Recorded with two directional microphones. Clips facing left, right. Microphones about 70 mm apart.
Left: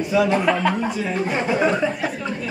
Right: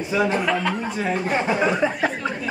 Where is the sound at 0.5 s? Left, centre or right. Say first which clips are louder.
Left 3 dB; centre.